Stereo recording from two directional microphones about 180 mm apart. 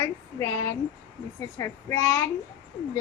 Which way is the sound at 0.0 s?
15° left (ahead or behind).